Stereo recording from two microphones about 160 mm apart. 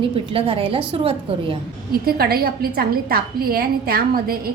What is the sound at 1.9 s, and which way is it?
A woman's voice, 70° right (ahead or behind).